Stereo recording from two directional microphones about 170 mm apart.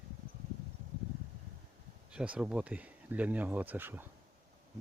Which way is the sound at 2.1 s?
5° right (ahead or behind).